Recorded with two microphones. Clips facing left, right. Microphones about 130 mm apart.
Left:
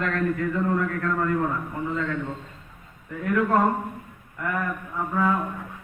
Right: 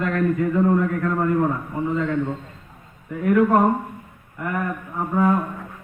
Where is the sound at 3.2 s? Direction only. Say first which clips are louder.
Right 5 dB; 20° right (ahead or behind).